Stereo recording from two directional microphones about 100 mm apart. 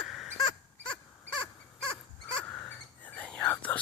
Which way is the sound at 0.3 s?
50° left (ahead or behind).